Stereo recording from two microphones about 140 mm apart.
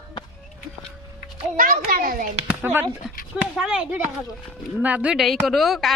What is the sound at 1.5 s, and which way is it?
Speech, 90° right.